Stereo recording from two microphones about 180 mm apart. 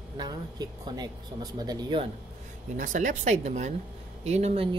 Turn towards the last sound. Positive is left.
turn(degrees=-35)  # may be behind; listen again after turning